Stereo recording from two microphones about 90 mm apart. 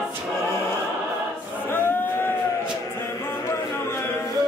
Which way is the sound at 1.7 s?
25° left (ahead or behind).